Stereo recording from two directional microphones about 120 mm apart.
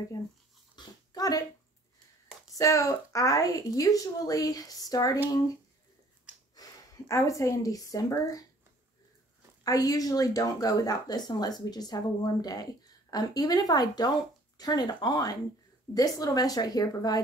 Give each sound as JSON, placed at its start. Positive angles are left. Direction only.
{"t": 0.1, "sound": "a woman's voice", "side_deg": 30}
{"t": 0.7, "sound": "dog", "side_deg": 30}
{"t": 2.5, "sound": "a woman's voice", "side_deg": 30}
{"t": 6.5, "sound": "speech", "side_deg": 30}
{"t": 9.6, "sound": "speech", "side_deg": 30}